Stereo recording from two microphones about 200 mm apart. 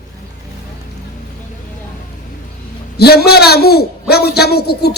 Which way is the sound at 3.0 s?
50° left (ahead or behind).